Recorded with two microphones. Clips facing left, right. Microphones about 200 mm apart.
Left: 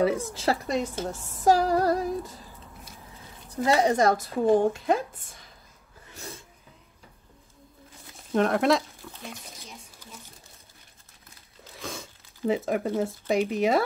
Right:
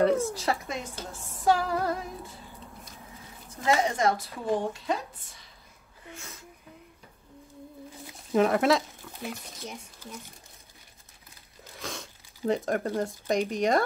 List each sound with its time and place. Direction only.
0.2 s speech: 25° left (ahead or behind)
1.4 s female singing: 40° left (ahead or behind)
3.6 s a woman's voice: 35° left (ahead or behind); by 5.4 s 50° left (ahead or behind)
6.1 s speech: 35° left (ahead or behind)
8.3 s speech: 5° right (ahead or behind)
11.6 s speech: centre (ahead or behind)